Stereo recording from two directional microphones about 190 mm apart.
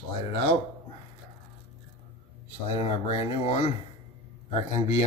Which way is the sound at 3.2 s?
30° left (ahead or behind).